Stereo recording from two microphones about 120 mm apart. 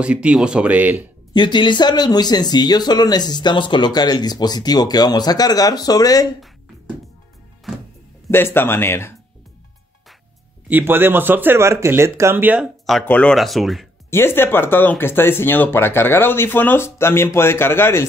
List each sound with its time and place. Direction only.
0.0 s speech: 10° right (ahead or behind)
1.3 s speech: 40° left (ahead or behind)
7.7 s music: centre (ahead or behind)
8.3 s speech: 20° left (ahead or behind)
10.7 s speech: 15° right (ahead or behind)
13.0 s speech: 10° left (ahead or behind)
13.4 s speech: centre (ahead or behind)
14.1 s speech: 20° left (ahead or behind)